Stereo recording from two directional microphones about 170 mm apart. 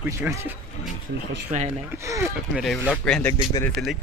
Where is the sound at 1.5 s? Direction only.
45° right (ahead or behind).